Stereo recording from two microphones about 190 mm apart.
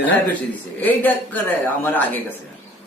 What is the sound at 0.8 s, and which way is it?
A woman's voice, 10° left (ahead or behind).